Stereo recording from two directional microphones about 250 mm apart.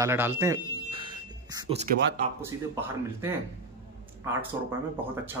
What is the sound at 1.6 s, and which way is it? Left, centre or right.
Speech, right.